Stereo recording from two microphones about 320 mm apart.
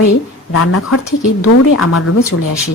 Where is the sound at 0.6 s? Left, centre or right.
Left.